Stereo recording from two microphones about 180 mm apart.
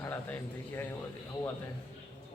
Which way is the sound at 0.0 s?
10° left (ahead or behind).